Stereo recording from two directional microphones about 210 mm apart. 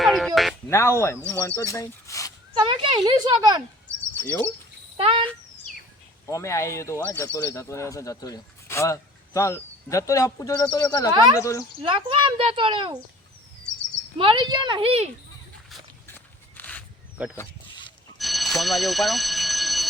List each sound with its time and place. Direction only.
0.0 s music: centre (ahead or behind)
0.7 s speech: 10° left (ahead or behind)
2.6 s a child's voice: 20° right (ahead or behind)
4.2 s speech: 10° left (ahead or behind)
4.9 s a child's voice: 25° right (ahead or behind)
6.2 s speech: 15° left (ahead or behind)
11.9 s a child's voice: 25° right (ahead or behind)
14.2 s a child's voice: 25° right (ahead or behind)
16.0 s walk: 10° left (ahead or behind)
17.3 s a sound: 20° left (ahead or behind)
18.2 s alarm clock: centre (ahead or behind)